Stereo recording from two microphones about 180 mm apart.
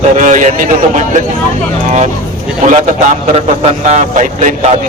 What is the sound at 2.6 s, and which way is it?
A man's voice, 40° right (ahead or behind).